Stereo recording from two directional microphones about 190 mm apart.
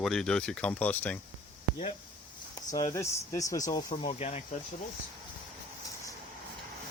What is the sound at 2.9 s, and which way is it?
Speech, 15° left (ahead or behind).